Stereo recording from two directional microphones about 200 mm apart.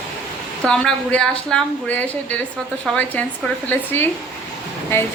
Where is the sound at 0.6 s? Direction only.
5° left (ahead or behind).